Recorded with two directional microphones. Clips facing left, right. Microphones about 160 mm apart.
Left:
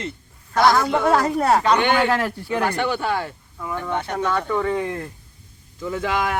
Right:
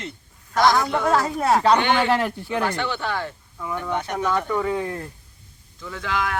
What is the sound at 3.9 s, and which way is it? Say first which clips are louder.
Speech: even; 10° right (ahead or behind).